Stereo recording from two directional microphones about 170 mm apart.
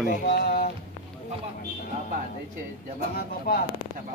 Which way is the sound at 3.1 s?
65° left (ahead or behind).